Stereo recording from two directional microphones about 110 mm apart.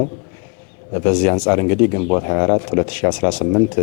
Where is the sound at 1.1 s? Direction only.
10° left (ahead or behind).